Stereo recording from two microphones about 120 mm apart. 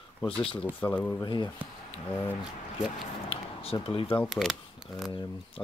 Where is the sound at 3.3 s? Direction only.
55° left (ahead or behind).